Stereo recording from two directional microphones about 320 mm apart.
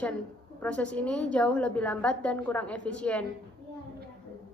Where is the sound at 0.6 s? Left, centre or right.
Centre.